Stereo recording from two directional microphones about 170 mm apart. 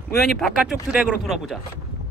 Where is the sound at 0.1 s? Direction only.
Centre (ahead or behind).